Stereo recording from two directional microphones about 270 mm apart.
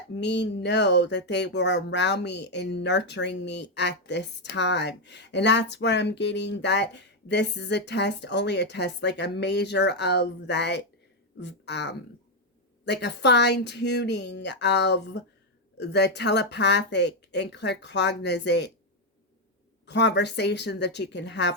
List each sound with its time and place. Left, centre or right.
0.2 s speech: left
19.8 s speech: left